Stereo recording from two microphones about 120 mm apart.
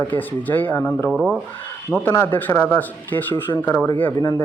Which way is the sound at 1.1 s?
5° right (ahead or behind).